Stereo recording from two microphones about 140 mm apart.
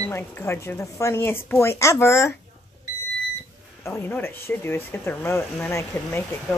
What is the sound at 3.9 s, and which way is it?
Speech, 15° left (ahead or behind).